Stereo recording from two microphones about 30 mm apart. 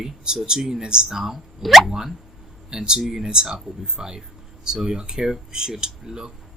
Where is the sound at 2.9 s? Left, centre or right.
Centre.